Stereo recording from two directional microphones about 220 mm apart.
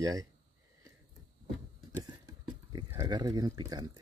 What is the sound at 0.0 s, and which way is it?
Speech, 15° right (ahead or behind).